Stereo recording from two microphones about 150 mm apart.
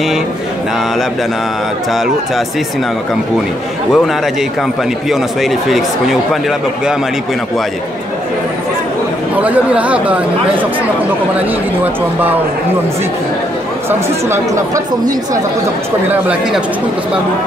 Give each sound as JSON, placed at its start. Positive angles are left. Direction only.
{"t": 1.9, "sound": "speech", "side_deg": 0}
{"t": 3.9, "sound": "speech", "side_deg": 0}
{"t": 9.4, "sound": "speech", "side_deg": -10}
{"t": 13.8, "sound": "speech", "side_deg": -15}
{"t": 16.1, "sound": "speech", "side_deg": -10}